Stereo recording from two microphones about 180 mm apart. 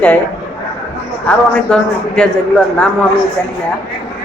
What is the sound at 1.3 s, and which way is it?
A woman's voice, 5° left (ahead or behind).